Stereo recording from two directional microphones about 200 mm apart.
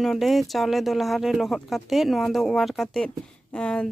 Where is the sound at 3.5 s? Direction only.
5° left (ahead or behind).